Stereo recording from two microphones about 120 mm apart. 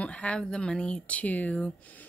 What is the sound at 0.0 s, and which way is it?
Speech, 10° left (ahead or behind).